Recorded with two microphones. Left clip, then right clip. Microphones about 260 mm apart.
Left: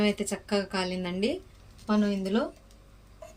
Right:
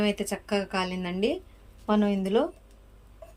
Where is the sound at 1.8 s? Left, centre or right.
Centre.